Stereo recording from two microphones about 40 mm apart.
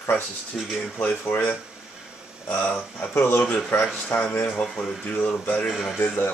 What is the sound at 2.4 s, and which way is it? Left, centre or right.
Speech, left.